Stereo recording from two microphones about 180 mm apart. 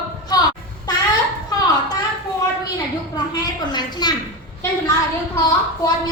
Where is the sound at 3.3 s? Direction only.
25° left (ahead or behind).